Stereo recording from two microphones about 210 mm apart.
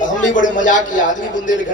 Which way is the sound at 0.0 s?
35° left (ahead or behind).